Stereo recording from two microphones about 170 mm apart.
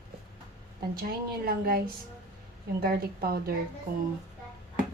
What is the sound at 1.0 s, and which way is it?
Speech, 60° right (ahead or behind).